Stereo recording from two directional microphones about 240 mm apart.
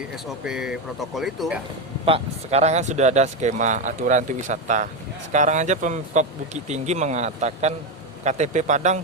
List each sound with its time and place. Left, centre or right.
0.4 s speech: centre
2.0 s speech: right